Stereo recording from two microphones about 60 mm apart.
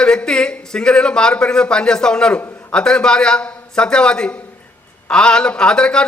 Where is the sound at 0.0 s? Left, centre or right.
Centre.